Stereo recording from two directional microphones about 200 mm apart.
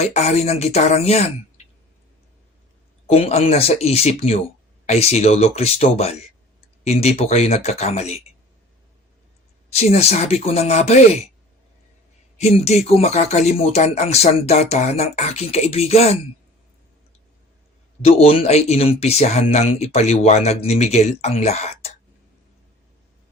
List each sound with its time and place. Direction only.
0.0 s speech: 35° left (ahead or behind)
3.1 s speech: 30° left (ahead or behind)
9.7 s speech: 30° left (ahead or behind)
12.4 s speech: 30° left (ahead or behind)
18.0 s speech: 30° left (ahead or behind)